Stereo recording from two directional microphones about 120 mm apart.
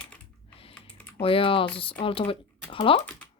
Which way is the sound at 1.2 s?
50° left (ahead or behind).